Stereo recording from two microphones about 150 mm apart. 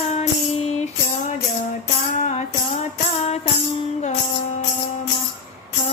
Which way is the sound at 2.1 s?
55° left (ahead or behind).